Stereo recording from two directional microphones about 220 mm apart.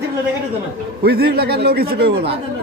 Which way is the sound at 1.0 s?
45° right (ahead or behind).